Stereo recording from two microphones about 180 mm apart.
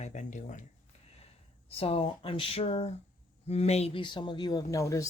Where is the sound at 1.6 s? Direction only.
35° left (ahead or behind).